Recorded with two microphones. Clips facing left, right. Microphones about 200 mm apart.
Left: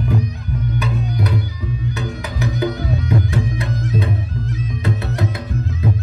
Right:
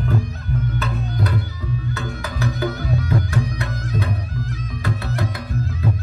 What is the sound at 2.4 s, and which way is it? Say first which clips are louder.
Music: left 3 dB; 20° left (ahead or behind).